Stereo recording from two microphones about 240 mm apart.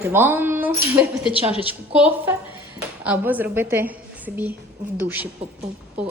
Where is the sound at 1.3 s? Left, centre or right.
Left.